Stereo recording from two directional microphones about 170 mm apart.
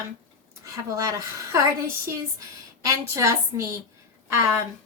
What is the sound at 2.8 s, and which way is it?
Speech, 20° right (ahead or behind).